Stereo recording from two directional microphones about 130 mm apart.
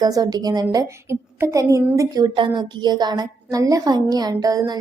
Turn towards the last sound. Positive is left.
turn(degrees=-30)  # may be behind; listen again after turning